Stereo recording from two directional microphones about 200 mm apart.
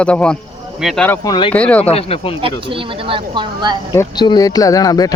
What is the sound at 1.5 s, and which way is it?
Speech, 5° left (ahead or behind).